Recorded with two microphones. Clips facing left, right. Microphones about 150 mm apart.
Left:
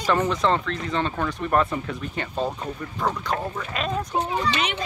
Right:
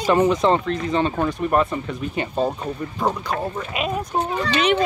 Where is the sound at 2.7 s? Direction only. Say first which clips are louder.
Right 3 dB; 25° right (ahead or behind).